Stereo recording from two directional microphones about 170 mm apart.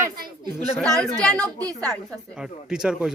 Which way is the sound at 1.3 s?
10° left (ahead or behind).